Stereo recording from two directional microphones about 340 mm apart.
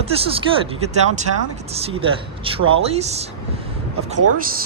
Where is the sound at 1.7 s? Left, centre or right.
Centre.